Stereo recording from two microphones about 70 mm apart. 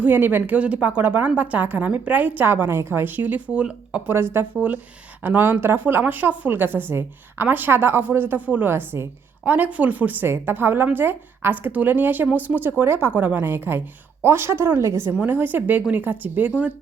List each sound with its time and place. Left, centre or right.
0.0 s speech: right
4.1 s a woman's voice: right
9.4 s speech: right
15.2 s speech: right